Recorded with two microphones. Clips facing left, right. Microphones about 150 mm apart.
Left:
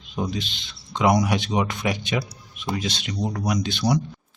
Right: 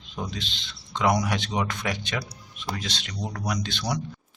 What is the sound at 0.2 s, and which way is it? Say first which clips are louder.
Speech: left 6 dB; 10° left (ahead or behind).